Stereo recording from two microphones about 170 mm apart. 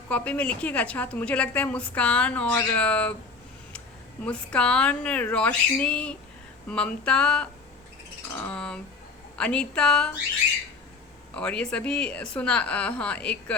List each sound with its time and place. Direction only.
0.1 s a woman's voice: 10° left (ahead or behind)
4.2 s a woman's voice: 5° left (ahead or behind)
11.3 s a woman's voice: 5° left (ahead or behind)